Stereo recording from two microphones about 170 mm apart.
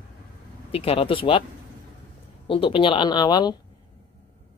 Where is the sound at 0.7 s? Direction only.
35° left (ahead or behind).